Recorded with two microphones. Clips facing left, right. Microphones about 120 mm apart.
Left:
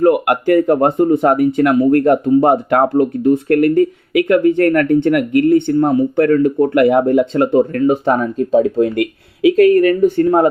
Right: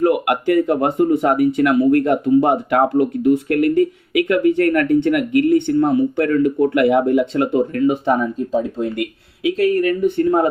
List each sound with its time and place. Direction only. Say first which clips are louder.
0.0 s speech: left 4 dB; 40° left (ahead or behind)
7.7 s speech: left 3 dB; 45° left (ahead or behind)
8.4 s speech: left 7 dB; 65° left (ahead or behind)
9.6 s speech: left 6 dB; 50° left (ahead or behind)